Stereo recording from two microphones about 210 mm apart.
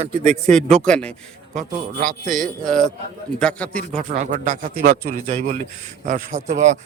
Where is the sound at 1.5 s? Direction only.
40° right (ahead or behind).